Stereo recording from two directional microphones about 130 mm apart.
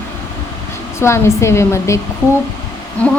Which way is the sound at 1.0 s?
20° left (ahead or behind).